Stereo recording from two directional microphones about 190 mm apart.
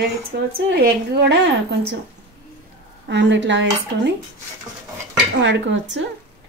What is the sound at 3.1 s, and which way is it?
Speech, 70° right (ahead or behind).